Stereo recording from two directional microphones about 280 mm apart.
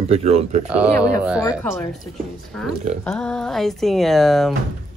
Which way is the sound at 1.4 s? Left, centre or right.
Centre.